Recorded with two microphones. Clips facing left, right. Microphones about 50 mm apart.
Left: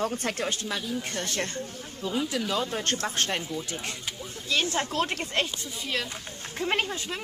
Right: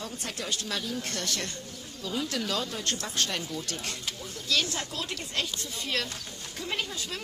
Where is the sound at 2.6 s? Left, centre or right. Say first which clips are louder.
Left 4 dB; left.